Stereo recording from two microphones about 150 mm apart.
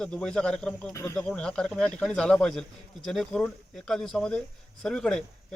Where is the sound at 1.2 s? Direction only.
5° left (ahead or behind).